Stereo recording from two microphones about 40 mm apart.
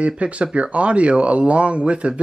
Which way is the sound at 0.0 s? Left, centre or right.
Right.